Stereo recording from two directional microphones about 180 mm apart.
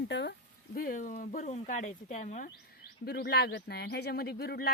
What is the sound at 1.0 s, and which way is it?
Speech, 45° left (ahead or behind).